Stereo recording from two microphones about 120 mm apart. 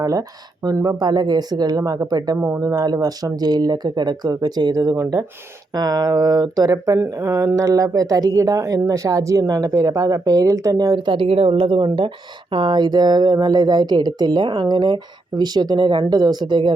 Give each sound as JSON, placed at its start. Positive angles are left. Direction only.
{"t": 0.0, "sound": "speech", "side_deg": -30}